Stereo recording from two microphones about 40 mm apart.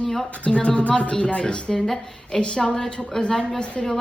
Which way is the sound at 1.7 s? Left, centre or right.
Centre.